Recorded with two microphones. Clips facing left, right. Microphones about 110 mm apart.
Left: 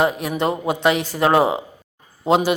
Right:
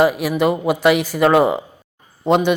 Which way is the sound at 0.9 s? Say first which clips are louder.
Right 4 dB; 30° left (ahead or behind).